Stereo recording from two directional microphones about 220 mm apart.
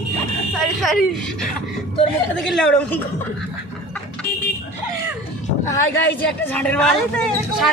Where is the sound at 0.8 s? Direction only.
Centre (ahead or behind).